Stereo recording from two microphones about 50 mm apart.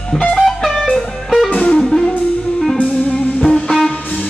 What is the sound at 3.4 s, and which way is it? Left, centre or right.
Music, centre.